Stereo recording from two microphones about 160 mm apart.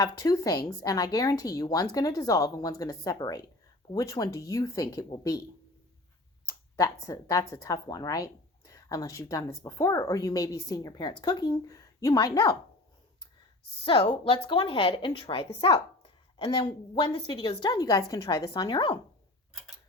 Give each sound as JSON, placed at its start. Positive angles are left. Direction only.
{"t": 0.0, "sound": "a woman's voice", "side_deg": 20}
{"t": 6.5, "sound": "a sound", "side_deg": 20}
{"t": 7.0, "sound": "a woman's voice", "side_deg": 20}
{"t": 13.8, "sound": "a woman's voice", "side_deg": 30}